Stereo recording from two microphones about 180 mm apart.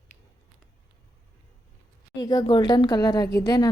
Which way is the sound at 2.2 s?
20° left (ahead or behind).